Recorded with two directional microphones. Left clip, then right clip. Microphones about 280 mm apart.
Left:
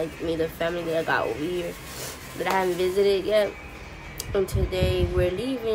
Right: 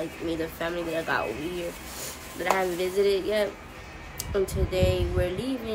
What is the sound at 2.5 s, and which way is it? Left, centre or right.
Speech, centre.